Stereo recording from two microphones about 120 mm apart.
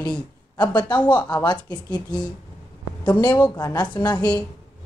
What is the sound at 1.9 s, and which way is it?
A woman's voice, 35° left (ahead or behind).